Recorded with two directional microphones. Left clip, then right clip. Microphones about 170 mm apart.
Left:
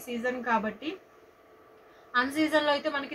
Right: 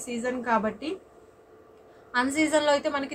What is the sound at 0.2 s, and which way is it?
Speech, 15° right (ahead or behind).